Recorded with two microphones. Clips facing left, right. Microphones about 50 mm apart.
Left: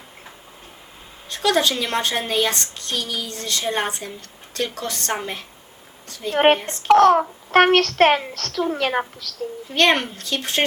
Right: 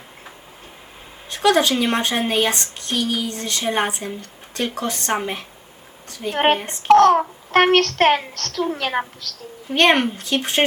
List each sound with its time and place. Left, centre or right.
1.5 s speech: right
6.3 s a child's voice: centre
9.7 s speech: right